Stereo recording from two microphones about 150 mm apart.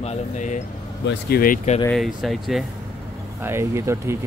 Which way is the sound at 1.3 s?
75° left (ahead or behind).